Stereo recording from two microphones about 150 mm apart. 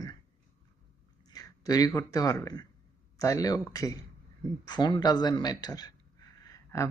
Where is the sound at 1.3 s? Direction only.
25° left (ahead or behind).